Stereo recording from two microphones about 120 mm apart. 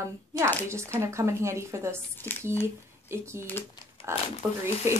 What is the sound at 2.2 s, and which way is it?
Speech, 15° left (ahead or behind).